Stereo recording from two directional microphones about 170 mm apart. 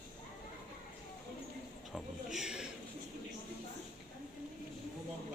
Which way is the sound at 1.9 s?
Centre (ahead or behind).